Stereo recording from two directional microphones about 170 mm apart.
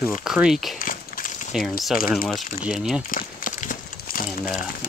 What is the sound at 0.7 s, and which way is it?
Walk, 55° left (ahead or behind).